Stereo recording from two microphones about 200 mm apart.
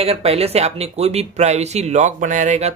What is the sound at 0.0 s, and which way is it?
Speech, 30° right (ahead or behind).